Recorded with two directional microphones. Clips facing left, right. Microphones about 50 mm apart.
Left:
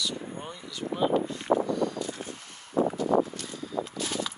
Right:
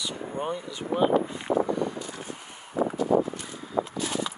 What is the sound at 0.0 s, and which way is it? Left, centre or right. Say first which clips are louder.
Speech: right 3 dB; right.